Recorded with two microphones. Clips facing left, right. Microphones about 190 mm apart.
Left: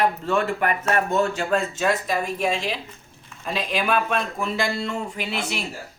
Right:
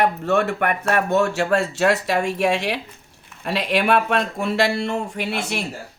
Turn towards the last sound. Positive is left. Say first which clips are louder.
# right 3 dB
turn(degrees=-60)  # may be behind; listen again after turning